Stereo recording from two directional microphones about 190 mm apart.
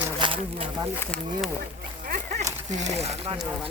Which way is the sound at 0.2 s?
25° right (ahead or behind).